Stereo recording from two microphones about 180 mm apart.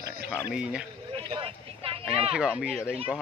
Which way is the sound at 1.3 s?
30° right (ahead or behind).